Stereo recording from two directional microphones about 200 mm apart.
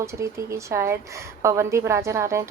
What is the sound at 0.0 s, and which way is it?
A woman's voice, 15° right (ahead or behind).